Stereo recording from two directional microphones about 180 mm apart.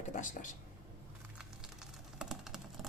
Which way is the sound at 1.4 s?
5° right (ahead or behind).